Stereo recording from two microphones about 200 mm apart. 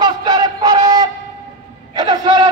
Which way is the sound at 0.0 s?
20° right (ahead or behind).